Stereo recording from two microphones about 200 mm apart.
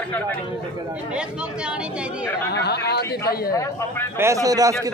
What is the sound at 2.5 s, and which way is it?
Speech, 55° left (ahead or behind).